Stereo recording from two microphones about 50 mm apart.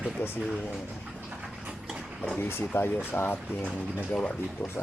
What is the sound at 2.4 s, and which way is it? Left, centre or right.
Speech, left.